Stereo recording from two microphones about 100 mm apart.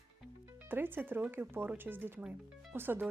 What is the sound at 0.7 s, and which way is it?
A woman's voice, 20° right (ahead or behind).